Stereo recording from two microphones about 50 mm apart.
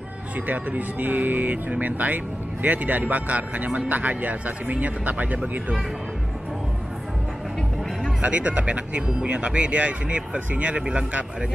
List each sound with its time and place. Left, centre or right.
0.5 s speech: right
8.2 s speech: right